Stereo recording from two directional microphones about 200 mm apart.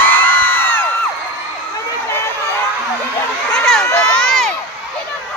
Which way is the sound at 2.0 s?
15° left (ahead or behind).